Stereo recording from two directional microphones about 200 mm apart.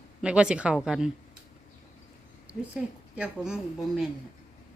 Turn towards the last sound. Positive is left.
turn(degrees=-5)  # may be behind; listen again after turning